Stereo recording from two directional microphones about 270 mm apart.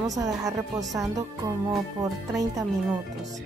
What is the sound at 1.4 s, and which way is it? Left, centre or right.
Speech, centre.